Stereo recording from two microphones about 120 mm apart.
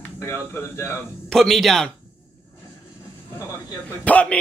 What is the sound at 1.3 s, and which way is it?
Speech, 5° left (ahead or behind).